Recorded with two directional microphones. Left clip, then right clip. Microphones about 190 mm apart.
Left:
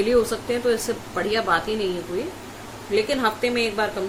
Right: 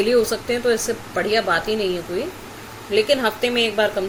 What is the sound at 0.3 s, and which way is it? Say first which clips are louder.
Speech: right 2 dB; 10° right (ahead or behind).